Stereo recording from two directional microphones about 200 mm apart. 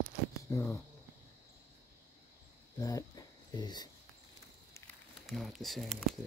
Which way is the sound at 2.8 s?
15° left (ahead or behind).